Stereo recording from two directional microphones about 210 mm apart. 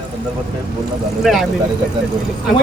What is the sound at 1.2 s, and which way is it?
Speech, centre (ahead or behind).